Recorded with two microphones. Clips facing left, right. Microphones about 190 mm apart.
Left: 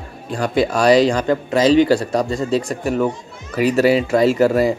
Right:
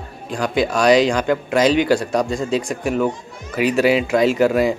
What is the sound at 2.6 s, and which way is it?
Speech, 5° right (ahead or behind).